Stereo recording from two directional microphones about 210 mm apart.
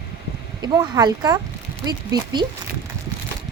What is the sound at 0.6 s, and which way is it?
Speech, 20° right (ahead or behind).